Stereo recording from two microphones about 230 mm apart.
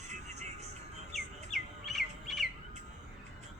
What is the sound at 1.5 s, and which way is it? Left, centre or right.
Bird, centre.